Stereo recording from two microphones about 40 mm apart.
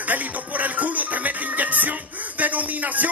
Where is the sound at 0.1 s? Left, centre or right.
Right.